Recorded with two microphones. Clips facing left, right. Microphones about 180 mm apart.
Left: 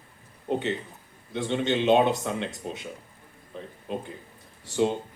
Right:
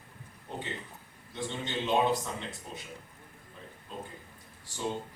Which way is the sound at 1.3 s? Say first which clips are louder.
Left 10 dB; 75° left (ahead or behind).